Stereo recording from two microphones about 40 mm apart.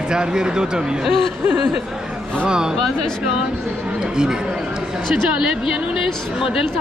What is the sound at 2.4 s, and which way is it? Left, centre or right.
Speech, right.